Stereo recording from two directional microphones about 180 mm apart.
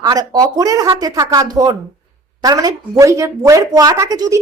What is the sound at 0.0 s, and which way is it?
A woman's voice, 20° right (ahead or behind).